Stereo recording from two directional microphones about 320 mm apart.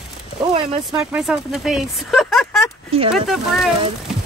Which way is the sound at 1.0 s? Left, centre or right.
Centre.